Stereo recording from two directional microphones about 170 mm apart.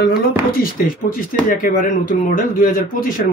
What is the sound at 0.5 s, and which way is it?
Speech, 55° left (ahead or behind).